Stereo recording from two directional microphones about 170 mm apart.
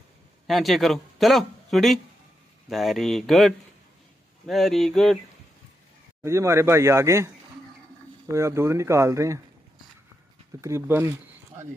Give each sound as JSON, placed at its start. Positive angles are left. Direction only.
{"t": 0.5, "sound": "speech", "side_deg": 0}
{"t": 6.2, "sound": "speech", "side_deg": -15}
{"t": 10.6, "sound": "speech", "side_deg": -15}